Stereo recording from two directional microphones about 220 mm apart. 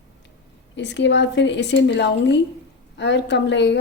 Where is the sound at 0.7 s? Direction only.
55° left (ahead or behind).